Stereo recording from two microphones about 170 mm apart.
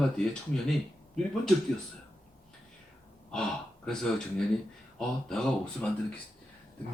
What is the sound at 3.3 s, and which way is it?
Speech, 5° left (ahead or behind).